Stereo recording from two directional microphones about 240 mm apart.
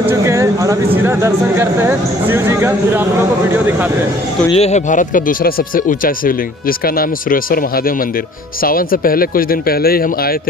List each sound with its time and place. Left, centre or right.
0.1 s speech: centre
4.6 s speech: left